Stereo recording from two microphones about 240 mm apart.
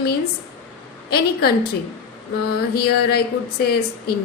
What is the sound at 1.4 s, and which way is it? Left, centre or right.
Speech, left.